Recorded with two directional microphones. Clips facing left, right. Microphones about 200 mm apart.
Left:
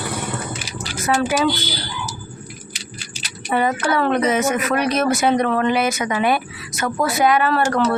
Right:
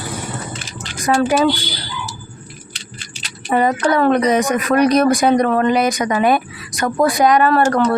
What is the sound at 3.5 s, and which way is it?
Speech, 40° right (ahead or behind).